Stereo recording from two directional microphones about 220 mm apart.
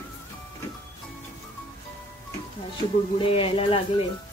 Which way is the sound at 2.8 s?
25° left (ahead or behind).